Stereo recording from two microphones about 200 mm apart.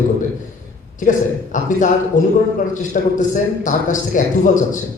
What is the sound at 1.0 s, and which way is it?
A man's voice, 40° left (ahead or behind).